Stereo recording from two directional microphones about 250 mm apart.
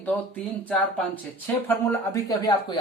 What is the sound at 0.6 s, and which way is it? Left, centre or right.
Speech, centre.